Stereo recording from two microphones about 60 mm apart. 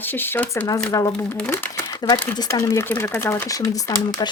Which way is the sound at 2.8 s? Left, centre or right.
Left.